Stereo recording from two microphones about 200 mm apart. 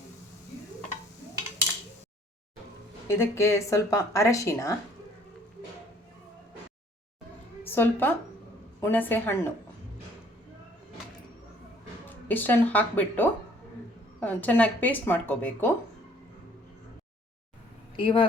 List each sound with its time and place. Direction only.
3.1 s speech: 15° left (ahead or behind)
7.6 s a woman's voice: 10° left (ahead or behind)
12.0 s speech: 10° left (ahead or behind)
17.9 s speech: 25° left (ahead or behind)